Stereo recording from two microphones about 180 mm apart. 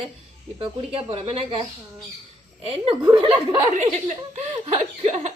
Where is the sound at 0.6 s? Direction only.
30° right (ahead or behind).